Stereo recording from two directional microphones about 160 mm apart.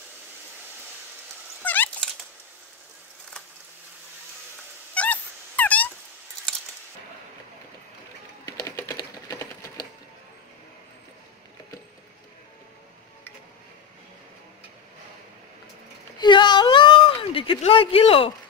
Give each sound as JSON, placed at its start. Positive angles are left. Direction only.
{"t": 1.6, "sound": "cat", "side_deg": 10}
{"t": 4.9, "sound": "dog", "side_deg": 10}
{"t": 8.5, "sound": "typing", "side_deg": 25}
{"t": 9.3, "sound": "typewriter", "side_deg": 25}
{"t": 16.2, "sound": "whimper", "side_deg": 30}